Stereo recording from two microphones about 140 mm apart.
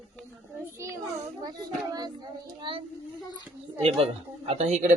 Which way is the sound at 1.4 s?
30° right (ahead or behind).